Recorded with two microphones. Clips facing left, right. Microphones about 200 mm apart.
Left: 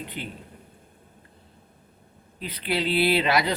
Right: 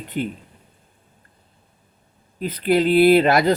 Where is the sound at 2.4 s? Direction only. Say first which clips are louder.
Right 9 dB; 45° right (ahead or behind).